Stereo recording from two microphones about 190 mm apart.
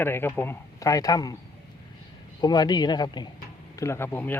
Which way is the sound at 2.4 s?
20° left (ahead or behind).